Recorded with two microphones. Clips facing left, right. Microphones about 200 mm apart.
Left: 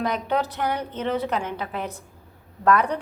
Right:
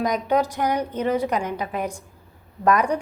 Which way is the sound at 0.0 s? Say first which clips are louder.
Right 3 dB; 10° right (ahead or behind).